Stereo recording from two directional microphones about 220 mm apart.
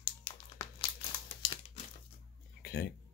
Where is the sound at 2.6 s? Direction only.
50° left (ahead or behind).